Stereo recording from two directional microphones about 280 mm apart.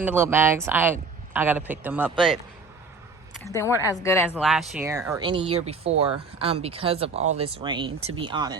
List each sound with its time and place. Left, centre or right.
0.0 s a man's voice: centre
3.5 s a woman's voice: centre
4.4 s speech: centre